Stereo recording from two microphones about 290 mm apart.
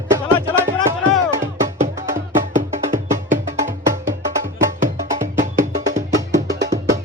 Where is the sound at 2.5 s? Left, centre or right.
Right.